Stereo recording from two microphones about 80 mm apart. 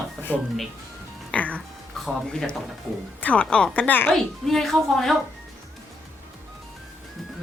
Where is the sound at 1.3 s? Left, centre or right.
Centre.